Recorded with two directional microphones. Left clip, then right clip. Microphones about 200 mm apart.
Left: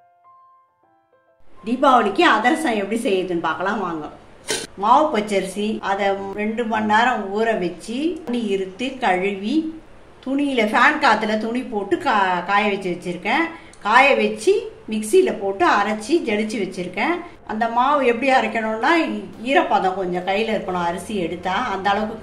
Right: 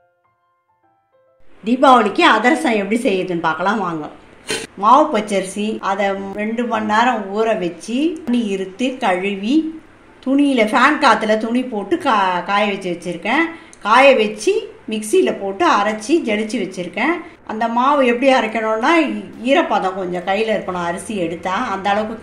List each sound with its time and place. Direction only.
1.6 s a woman's voice: 40° right (ahead or behind)